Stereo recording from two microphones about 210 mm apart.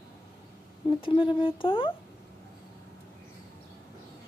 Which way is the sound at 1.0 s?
25° left (ahead or behind).